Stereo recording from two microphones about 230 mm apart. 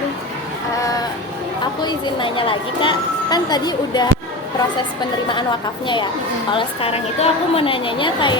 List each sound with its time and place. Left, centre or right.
1.8 s a woman's voice: centre
5.3 s a woman's voice: left